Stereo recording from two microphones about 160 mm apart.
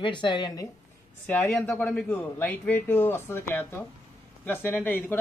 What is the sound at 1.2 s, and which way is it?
A man's voice, 10° left (ahead or behind).